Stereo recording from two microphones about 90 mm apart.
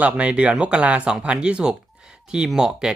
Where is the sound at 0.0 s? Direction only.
15° right (ahead or behind).